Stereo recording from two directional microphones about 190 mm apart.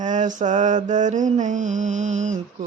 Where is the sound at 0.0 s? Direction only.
40° right (ahead or behind).